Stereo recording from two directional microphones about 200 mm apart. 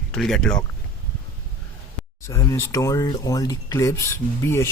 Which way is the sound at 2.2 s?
15° left (ahead or behind).